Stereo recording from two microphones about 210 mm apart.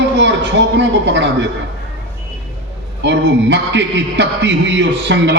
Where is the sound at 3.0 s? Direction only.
60° right (ahead or behind).